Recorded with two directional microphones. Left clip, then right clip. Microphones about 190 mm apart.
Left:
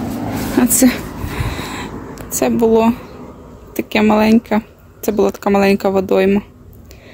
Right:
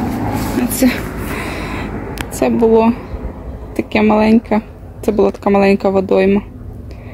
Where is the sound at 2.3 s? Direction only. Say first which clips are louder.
Right 1 dB; 5° left (ahead or behind).